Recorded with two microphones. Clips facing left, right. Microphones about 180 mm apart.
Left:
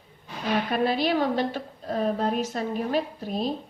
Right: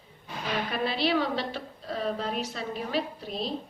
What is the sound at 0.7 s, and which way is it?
A woman's voice, 45° left (ahead or behind).